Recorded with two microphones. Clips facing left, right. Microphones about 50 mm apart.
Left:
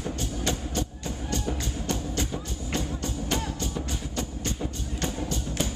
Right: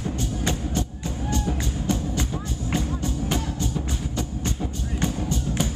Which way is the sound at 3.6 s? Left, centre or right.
Centre.